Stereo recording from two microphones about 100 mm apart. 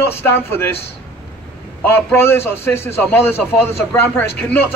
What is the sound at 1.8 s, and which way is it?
A woman's voice, 20° left (ahead or behind).